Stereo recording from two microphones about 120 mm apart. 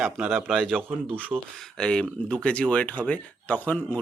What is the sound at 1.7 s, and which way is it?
Speech, 5° left (ahead or behind).